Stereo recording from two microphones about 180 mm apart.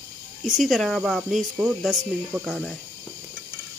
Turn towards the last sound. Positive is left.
turn(degrees=0)  # may be behind; listen again after turning